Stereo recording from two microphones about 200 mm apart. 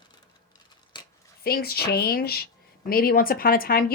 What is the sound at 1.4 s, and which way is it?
Speech, 50° left (ahead or behind).